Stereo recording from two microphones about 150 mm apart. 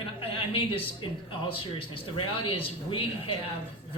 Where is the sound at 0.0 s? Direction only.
40° left (ahead or behind).